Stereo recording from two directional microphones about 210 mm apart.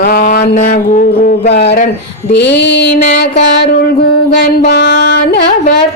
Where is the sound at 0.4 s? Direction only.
35° left (ahead or behind).